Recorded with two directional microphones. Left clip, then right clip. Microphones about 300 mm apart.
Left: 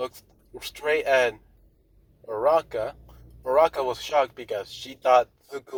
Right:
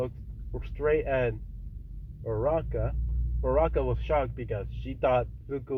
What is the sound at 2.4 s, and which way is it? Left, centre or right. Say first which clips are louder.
Speech: left 7 dB; centre.